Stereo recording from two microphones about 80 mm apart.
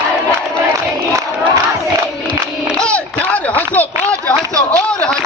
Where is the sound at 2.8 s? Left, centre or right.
Centre.